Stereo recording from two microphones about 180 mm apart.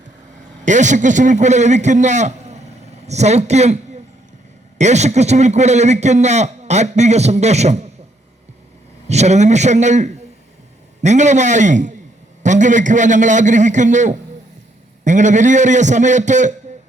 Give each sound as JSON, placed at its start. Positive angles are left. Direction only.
{"t": 0.6, "sound": "a man's voice", "side_deg": -45}
{"t": 4.8, "sound": "a man's voice", "side_deg": -40}
{"t": 9.0, "sound": "a man's voice", "side_deg": -40}